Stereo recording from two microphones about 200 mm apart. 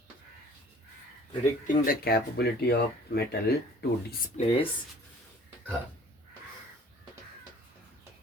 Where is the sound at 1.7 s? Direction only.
45° left (ahead or behind).